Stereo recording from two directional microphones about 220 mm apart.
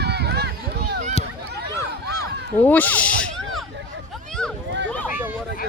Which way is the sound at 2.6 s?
10° left (ahead or behind).